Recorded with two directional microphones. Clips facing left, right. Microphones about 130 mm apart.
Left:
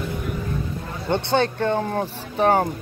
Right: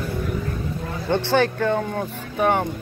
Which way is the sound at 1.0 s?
20° left (ahead or behind).